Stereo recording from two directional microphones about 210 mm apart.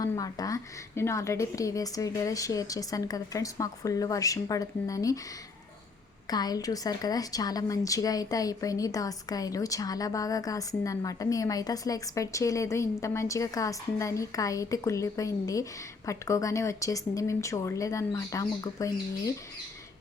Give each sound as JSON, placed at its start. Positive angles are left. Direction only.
{"t": 0.0, "sound": "a woman's voice", "side_deg": 15}
{"t": 6.2, "sound": "a woman's voice", "side_deg": 20}